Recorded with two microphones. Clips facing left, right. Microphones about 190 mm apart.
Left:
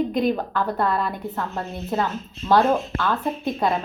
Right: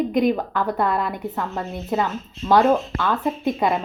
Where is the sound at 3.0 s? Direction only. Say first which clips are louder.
Right 2 dB; 15° right (ahead or behind).